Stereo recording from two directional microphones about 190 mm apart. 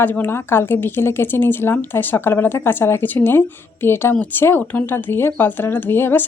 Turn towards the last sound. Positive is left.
turn(degrees=10)  # may be behind; listen again after turning